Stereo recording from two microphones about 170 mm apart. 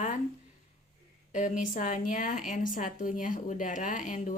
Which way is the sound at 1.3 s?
45° left (ahead or behind).